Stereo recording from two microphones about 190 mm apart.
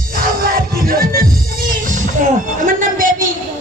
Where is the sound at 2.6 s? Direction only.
45° right (ahead or behind).